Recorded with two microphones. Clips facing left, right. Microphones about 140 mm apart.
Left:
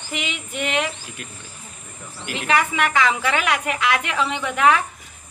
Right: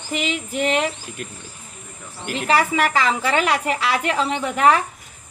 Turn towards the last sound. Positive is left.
turn(degrees=-35)  # may be behind; listen again after turning